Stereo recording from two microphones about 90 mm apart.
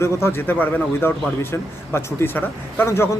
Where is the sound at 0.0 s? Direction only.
25° left (ahead or behind).